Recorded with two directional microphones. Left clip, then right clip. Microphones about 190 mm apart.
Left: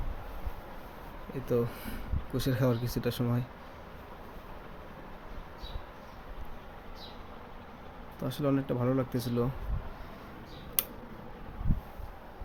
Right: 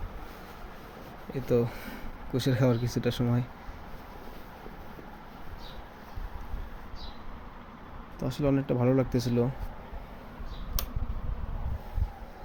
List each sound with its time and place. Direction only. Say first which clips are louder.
1.3 s speech: right 3 dB; 10° right (ahead or behind)
8.2 s speech: right 2 dB; 5° right (ahead or behind)